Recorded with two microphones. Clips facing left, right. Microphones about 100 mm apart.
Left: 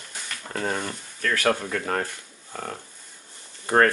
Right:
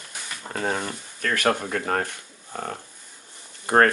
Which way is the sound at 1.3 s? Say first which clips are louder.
Right 1 dB; 20° right (ahead or behind).